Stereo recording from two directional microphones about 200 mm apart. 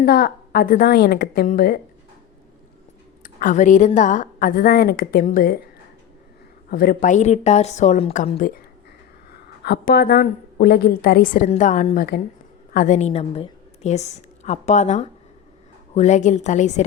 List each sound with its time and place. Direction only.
0.0 s a woman's voice: 50° left (ahead or behind)
3.2 s a woman's voice: 40° left (ahead or behind)
6.7 s a woman's voice: 50° left (ahead or behind)
9.3 s a woman's voice: 50° left (ahead or behind); by 16.8 s 35° left (ahead or behind)